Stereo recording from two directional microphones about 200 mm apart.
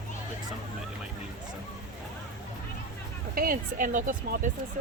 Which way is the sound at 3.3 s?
45° right (ahead or behind).